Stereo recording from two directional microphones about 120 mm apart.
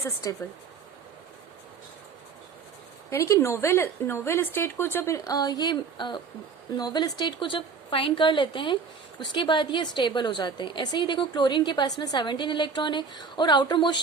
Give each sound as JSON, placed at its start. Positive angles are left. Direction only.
{"t": 0.2, "sound": "a woman's voice", "side_deg": 30}
{"t": 3.1, "sound": "a woman's voice", "side_deg": 25}